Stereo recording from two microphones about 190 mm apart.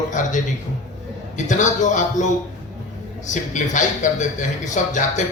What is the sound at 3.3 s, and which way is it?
A man's voice, 40° left (ahead or behind).